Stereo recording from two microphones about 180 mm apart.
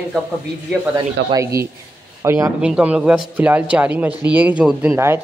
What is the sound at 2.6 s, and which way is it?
Speech, 5° right (ahead or behind).